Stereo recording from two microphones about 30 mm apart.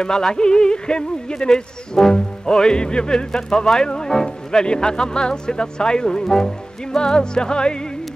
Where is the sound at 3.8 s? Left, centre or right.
Left.